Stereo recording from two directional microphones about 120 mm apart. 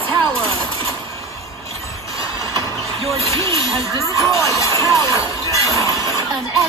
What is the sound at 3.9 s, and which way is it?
Speech, 25° left (ahead or behind).